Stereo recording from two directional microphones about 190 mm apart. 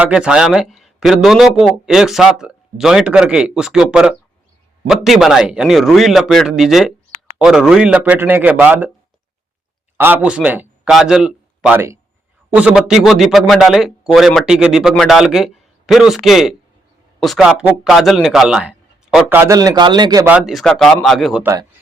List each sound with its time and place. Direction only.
0.0 s speech: 5° right (ahead or behind)
10.0 s a man's voice: 10° right (ahead or behind)
20.2 s speech: 5° right (ahead or behind)
21.4 s speech: 15° right (ahead or behind)